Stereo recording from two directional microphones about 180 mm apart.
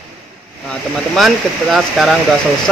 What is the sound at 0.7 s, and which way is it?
Speech, centre (ahead or behind).